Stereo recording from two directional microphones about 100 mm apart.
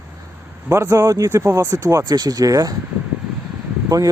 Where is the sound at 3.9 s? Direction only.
35° right (ahead or behind).